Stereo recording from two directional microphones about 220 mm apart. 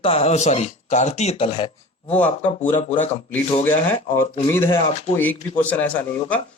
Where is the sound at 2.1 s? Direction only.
5° left (ahead or behind).